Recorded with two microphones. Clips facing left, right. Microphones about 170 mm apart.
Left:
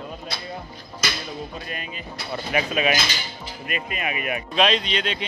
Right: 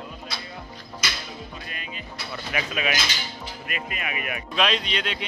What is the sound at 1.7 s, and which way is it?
Music, 40° left (ahead or behind).